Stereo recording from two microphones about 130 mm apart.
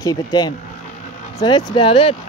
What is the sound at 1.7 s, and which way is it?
Speech, 40° left (ahead or behind).